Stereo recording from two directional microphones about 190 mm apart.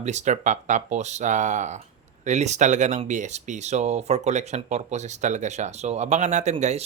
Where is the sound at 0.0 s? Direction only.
35° right (ahead or behind).